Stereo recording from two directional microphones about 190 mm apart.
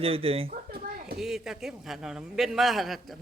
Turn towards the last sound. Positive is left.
turn(degrees=0)  # may be behind; listen again after turning